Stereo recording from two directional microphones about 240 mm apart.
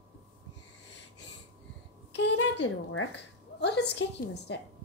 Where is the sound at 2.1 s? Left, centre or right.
Left.